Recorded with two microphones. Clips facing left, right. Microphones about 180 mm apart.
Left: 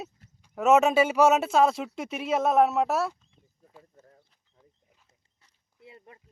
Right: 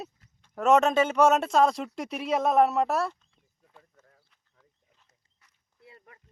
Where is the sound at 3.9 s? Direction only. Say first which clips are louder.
Left 6 dB; 30° left (ahead or behind).